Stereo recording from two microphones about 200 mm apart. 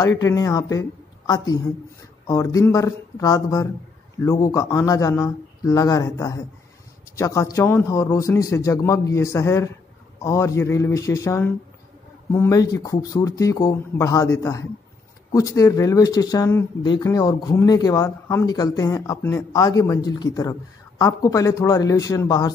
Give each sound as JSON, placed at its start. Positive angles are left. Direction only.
{"t": 0.2, "sound": "speech", "side_deg": 15}